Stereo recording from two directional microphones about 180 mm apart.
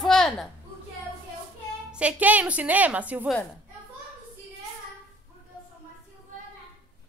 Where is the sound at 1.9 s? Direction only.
10° right (ahead or behind).